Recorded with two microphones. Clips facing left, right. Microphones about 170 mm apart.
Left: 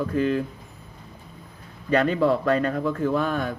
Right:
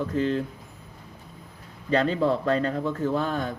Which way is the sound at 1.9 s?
30° right (ahead or behind).